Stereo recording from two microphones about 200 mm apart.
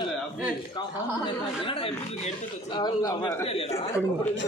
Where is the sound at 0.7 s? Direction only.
25° left (ahead or behind).